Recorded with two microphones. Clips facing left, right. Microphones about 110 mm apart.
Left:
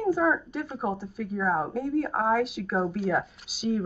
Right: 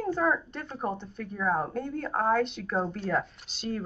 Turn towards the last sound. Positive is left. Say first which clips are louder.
# left 6 dB
turn(degrees=5)  # may be behind; listen again after turning